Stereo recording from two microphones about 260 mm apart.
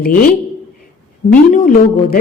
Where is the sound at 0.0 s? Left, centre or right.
Left.